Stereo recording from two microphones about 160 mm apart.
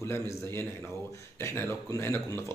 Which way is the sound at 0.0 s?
15° left (ahead or behind).